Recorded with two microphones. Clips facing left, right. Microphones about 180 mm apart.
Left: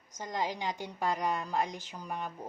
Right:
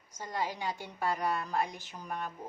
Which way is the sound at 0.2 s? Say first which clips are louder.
Left 1 dB; 15° left (ahead or behind).